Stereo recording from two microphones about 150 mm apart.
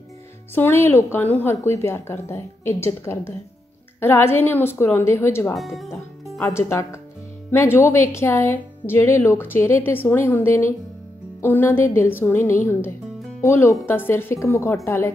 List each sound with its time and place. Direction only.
0.6 s a woman's voice: 15° left (ahead or behind)
5.6 s speech: centre (ahead or behind)
6.4 s a woman's voice: 20° left (ahead or behind)